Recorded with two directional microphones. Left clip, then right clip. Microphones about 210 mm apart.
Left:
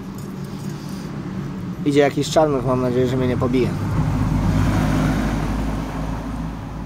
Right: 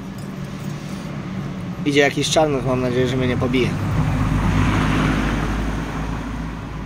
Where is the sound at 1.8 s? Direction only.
15° left (ahead or behind).